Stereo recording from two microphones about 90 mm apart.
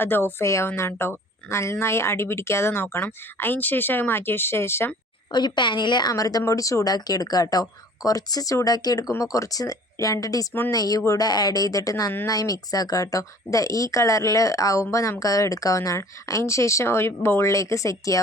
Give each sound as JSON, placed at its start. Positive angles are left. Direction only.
{"t": 0.0, "sound": "speech", "side_deg": 25}
{"t": 5.3, "sound": "a woman's voice", "side_deg": 55}